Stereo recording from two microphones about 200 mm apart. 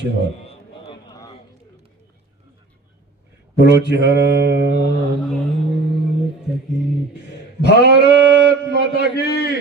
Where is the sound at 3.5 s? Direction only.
60° right (ahead or behind).